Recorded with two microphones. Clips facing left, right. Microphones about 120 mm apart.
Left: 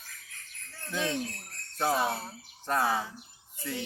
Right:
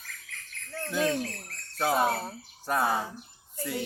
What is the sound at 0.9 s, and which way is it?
Speech, 45° right (ahead or behind).